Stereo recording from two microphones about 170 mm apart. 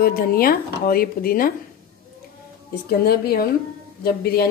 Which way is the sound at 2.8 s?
65° left (ahead or behind).